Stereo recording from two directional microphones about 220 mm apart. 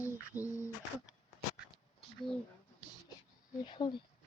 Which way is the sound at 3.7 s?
20° left (ahead or behind).